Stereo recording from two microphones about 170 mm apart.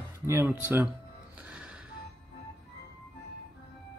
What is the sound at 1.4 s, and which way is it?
Music, 5° right (ahead or behind).